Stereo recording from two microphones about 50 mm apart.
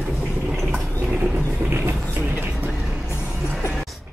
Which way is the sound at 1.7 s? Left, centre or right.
Right.